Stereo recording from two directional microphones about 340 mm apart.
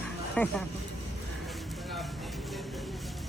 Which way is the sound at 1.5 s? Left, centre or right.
Centre.